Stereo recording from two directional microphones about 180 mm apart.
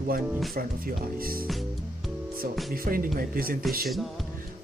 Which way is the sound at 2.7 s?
55° right (ahead or behind).